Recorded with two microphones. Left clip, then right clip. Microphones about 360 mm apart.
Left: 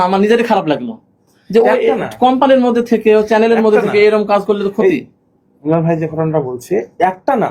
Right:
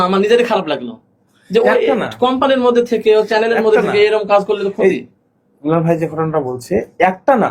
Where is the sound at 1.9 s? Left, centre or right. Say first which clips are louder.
Right 1 dB; centre.